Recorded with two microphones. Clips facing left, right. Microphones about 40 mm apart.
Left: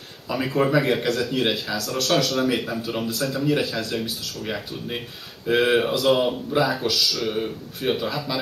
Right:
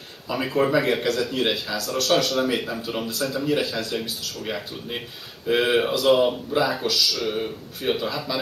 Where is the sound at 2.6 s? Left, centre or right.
Centre.